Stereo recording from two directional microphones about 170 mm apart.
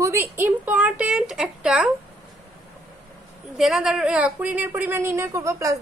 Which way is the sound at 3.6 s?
Centre (ahead or behind).